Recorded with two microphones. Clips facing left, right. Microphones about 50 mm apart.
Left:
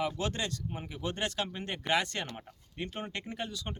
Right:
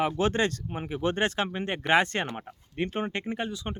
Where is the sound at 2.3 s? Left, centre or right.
Right.